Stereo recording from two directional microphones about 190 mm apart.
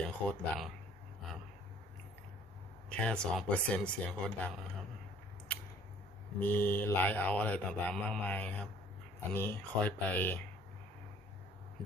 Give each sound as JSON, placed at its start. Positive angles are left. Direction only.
{"t": 0.3, "sound": "speech", "side_deg": 5}
{"t": 2.9, "sound": "speech", "side_deg": 5}
{"t": 6.4, "sound": "speech", "side_deg": 10}